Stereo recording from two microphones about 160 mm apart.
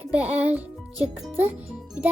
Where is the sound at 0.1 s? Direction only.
10° right (ahead or behind).